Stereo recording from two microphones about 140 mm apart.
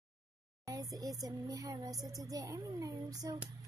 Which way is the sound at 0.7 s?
25° right (ahead or behind).